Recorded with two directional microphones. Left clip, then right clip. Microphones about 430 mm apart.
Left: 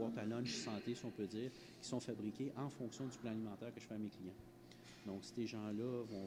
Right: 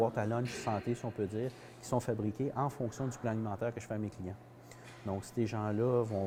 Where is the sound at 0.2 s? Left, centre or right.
Centre.